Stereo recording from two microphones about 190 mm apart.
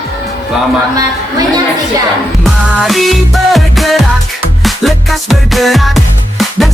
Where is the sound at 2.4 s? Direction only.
Centre (ahead or behind).